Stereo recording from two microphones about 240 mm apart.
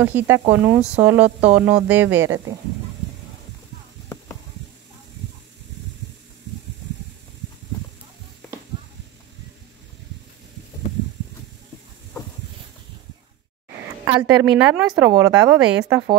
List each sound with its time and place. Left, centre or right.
0.0 s a woman's voice: centre
14.0 s a woman's voice: centre
15.6 s a woman's voice: centre